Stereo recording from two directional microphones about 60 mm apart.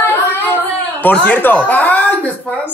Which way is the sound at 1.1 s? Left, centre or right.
Left.